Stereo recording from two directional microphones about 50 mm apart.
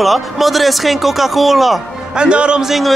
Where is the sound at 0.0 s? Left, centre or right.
Centre.